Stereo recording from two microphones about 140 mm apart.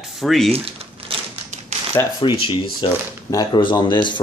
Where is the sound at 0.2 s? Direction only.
Centre (ahead or behind).